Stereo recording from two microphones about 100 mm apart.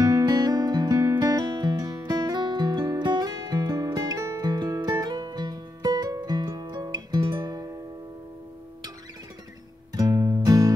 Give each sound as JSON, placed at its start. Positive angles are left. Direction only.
{"t": 0.0, "sound": "music", "side_deg": -40}
{"t": 9.9, "sound": "music", "side_deg": -40}